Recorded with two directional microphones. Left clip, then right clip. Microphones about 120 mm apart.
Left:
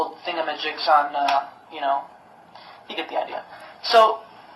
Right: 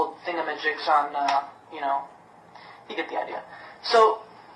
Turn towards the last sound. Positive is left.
turn(degrees=45)  # may be behind; listen again after turning